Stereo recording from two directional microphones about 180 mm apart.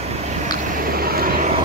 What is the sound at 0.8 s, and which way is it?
Vehicle, 55° right (ahead or behind).